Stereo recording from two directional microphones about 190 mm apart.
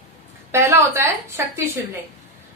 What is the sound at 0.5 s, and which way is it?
A woman's voice, 15° right (ahead or behind).